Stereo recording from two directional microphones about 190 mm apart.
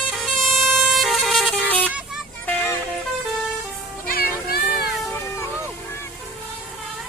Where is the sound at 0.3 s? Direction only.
Centre (ahead or behind).